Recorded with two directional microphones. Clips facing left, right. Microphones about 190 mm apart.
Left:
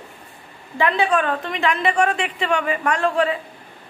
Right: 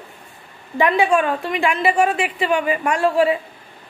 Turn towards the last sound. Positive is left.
turn(degrees=-5)  # may be behind; listen again after turning